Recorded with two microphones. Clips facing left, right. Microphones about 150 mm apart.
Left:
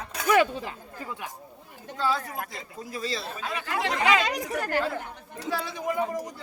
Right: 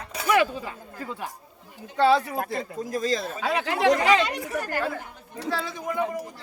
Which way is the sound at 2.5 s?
50° right (ahead or behind).